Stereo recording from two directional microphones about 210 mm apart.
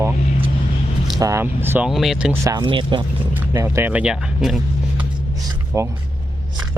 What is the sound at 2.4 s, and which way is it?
Speech, 20° right (ahead or behind).